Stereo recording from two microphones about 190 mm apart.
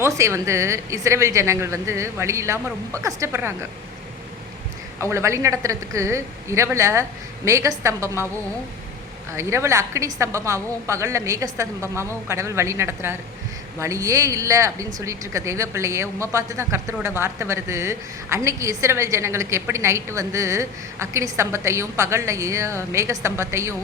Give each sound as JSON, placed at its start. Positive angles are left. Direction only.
{"t": 0.0, "sound": "speech", "side_deg": -15}
{"t": 4.9, "sound": "speech", "side_deg": -15}
{"t": 9.3, "sound": "speech", "side_deg": -15}